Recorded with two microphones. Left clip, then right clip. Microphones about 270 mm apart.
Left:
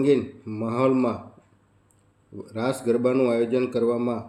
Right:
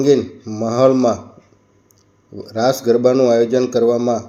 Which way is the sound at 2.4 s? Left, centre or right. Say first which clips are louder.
Right 11 dB; centre.